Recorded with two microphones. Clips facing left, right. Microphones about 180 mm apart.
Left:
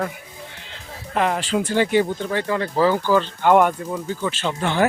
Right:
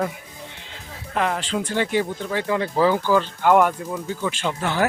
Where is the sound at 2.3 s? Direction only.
10° right (ahead or behind).